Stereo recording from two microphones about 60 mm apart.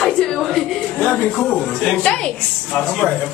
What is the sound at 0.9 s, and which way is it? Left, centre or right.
A woman's voice, centre.